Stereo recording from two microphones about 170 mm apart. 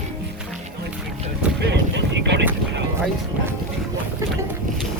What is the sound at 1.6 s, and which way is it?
Boat, 85° right.